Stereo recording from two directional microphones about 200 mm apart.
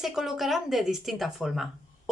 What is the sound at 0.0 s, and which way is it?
Speech, centre (ahead or behind).